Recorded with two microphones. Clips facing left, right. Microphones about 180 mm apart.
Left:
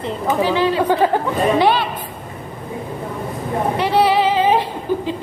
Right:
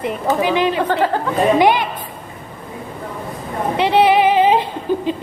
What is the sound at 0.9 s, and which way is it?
Speech, 15° left (ahead or behind).